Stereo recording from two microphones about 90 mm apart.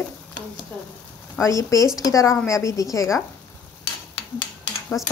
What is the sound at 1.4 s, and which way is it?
Speech, 35° left (ahead or behind).